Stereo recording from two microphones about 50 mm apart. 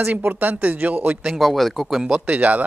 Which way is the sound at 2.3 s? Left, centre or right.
Right.